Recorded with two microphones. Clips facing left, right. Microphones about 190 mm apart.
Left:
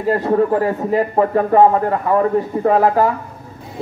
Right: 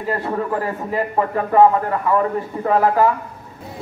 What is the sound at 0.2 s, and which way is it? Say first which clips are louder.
Speech: left 7 dB; 40° left (ahead or behind).